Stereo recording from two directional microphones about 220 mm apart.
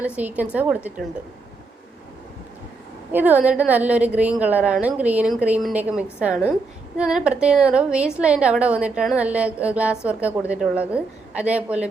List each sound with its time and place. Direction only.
0.0 s a woman's voice: 5° right (ahead or behind)
3.1 s a woman's voice: 10° right (ahead or behind)